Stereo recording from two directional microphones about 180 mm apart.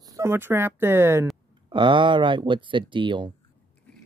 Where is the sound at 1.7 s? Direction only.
25° right (ahead or behind).